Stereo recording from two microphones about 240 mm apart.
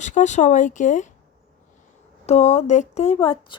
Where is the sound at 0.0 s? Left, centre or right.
Left.